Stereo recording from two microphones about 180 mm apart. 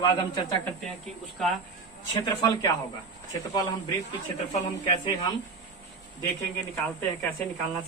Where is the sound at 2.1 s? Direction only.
20° left (ahead or behind).